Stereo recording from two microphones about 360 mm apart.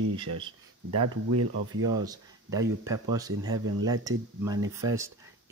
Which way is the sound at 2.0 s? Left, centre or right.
Centre.